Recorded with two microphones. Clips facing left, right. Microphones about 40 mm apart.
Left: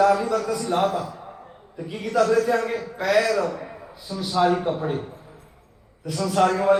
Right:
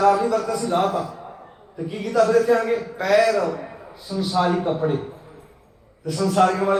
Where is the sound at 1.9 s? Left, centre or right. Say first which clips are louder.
Right 2 dB; left.